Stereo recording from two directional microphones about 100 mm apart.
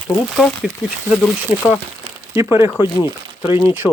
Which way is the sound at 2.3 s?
25° right (ahead or behind).